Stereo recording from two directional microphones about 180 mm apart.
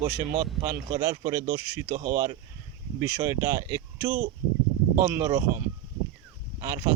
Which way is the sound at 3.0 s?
15° right (ahead or behind).